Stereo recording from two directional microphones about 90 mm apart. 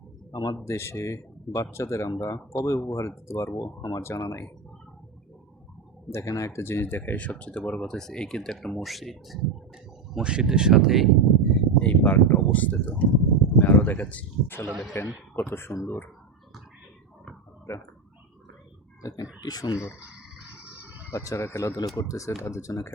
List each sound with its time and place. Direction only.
0.3 s speech: 50° left (ahead or behind)
0.6 s speech: 30° left (ahead or behind)
6.1 s speech: 35° left (ahead or behind); by 11.9 s 5° left (ahead or behind)
12.0 s speech: 20° left (ahead or behind)
17.7 s speech: 35° left (ahead or behind)
19.4 s speech: 45° left (ahead or behind)
21.1 s speech: 35° left (ahead or behind)